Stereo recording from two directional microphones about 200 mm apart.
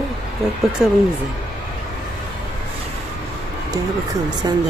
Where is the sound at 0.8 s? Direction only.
5° right (ahead or behind).